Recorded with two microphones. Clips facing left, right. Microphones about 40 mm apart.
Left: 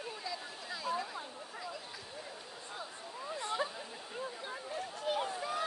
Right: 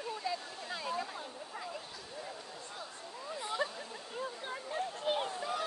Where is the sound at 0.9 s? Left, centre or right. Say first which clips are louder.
Left 2 dB; centre.